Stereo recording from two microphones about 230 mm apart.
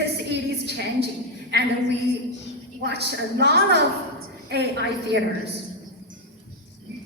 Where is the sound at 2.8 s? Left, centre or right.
Right.